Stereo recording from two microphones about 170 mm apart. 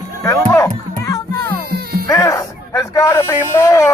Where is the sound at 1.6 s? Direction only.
65° right (ahead or behind).